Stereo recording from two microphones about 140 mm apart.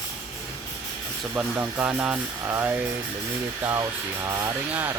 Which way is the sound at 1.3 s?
10° right (ahead or behind).